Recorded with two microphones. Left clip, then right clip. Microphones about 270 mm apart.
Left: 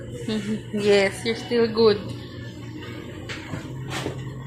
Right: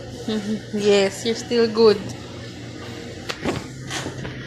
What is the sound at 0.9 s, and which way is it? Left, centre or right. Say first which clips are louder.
A woman's voice: right 1 dB; centre.